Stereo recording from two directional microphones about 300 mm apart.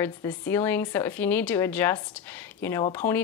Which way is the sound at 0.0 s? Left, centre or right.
Centre.